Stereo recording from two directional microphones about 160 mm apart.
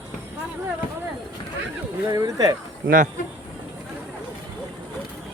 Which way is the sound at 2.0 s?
20° right (ahead or behind).